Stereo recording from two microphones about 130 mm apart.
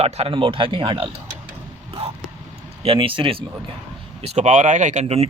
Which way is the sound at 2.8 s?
45° right (ahead or behind).